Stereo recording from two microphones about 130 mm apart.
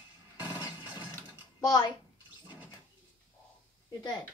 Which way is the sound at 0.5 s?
25° left (ahead or behind).